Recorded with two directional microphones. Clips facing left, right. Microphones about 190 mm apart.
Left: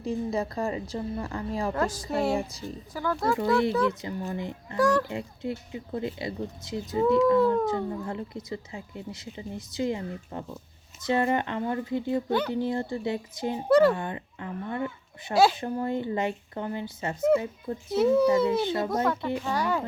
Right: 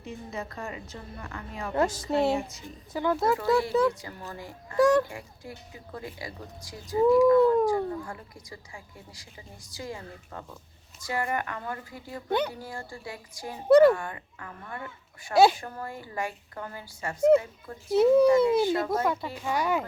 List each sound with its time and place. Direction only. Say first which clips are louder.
0.0 s a woman's voice: left 9 dB; 35° left (ahead or behind)
1.7 s a child's voice: right 2 dB; 25° right (ahead or behind)
2.3 s a woman's voice: left 1 dB; 35° left (ahead or behind)
2.9 s a child's voice: right 2 dB; 20° right (ahead or behind)
3.8 s speech: even; 20° left (ahead or behind)
4.8 s a child's voice: right 2 dB; 20° right (ahead or behind)
5.0 s speech: left 9 dB; 25° left (ahead or behind)
12.3 s speech: right 3 dB; 15° right (ahead or behind)
12.5 s speech: left 11 dB; 20° left (ahead or behind)
17.9 s speech: right 2 dB; 15° right (ahead or behind)
18.3 s speech: right 2 dB; 20° left (ahead or behind)
18.9 s speech: left 1 dB; 10° right (ahead or behind)